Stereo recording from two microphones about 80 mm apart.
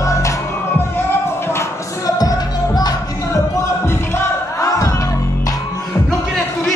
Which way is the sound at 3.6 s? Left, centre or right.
Left.